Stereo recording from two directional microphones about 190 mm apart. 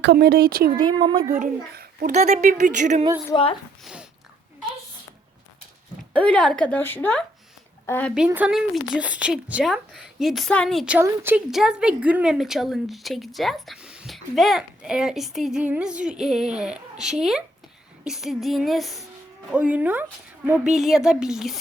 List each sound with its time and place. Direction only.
0.0 s speech: 60° right (ahead or behind)
0.8 s speech: 25° right (ahead or behind)
1.3 s a child's voice: 45° right (ahead or behind)
2.1 s speech: 40° right (ahead or behind)
6.1 s a woman's voice: 5° left (ahead or behind)
8.1 s a woman's voice: 5° right (ahead or behind)